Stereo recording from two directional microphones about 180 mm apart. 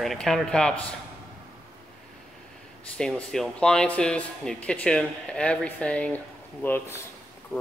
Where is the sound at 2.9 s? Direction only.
5° left (ahead or behind).